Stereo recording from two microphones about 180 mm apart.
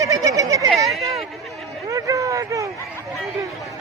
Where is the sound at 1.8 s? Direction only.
20° right (ahead or behind).